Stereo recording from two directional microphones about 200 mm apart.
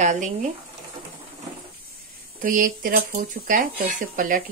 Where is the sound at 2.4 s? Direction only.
45° right (ahead or behind).